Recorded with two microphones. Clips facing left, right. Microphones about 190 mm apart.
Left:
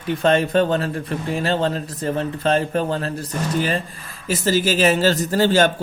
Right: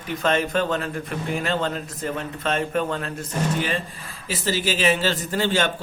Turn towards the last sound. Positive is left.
turn(degrees=40)  # may be behind; listen again after turning